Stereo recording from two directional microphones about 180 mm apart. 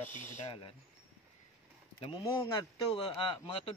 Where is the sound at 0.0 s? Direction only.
10° left (ahead or behind).